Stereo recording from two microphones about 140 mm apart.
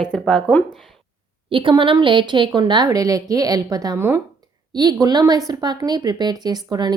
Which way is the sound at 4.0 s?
15° right (ahead or behind).